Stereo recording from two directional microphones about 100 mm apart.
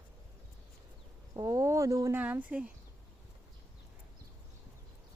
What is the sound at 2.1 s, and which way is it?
Speech, 15° right (ahead or behind).